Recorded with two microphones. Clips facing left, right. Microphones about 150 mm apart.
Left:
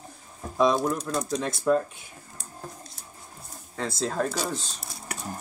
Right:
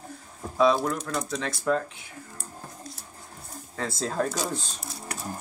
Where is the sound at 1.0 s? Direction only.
30° left (ahead or behind).